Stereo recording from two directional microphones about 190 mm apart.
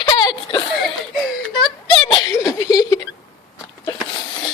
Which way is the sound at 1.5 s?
25° left (ahead or behind).